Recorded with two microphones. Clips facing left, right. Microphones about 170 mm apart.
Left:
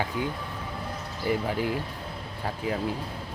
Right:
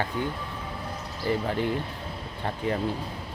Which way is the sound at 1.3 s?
10° left (ahead or behind).